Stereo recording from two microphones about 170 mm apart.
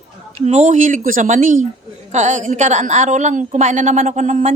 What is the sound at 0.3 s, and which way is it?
A woman's voice, 40° right (ahead or behind).